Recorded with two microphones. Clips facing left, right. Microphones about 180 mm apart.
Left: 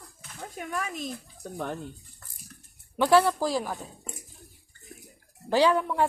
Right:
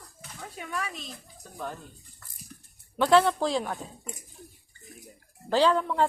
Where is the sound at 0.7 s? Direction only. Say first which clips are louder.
Left 3 dB; 45° left (ahead or behind).